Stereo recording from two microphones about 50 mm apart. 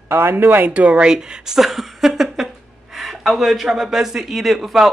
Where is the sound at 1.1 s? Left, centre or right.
Centre.